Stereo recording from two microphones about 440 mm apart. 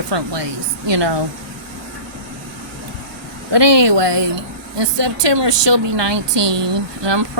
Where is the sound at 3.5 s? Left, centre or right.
Right.